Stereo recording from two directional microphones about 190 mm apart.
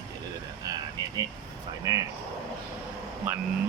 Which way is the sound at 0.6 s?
20° right (ahead or behind).